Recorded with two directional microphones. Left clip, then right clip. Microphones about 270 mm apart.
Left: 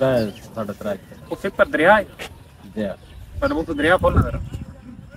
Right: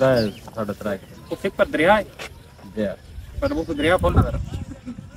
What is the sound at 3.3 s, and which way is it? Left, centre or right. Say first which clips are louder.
Speech: left 2 dB; centre.